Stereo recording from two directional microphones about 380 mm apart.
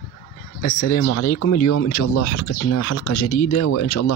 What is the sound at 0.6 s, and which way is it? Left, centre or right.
A man's voice, left.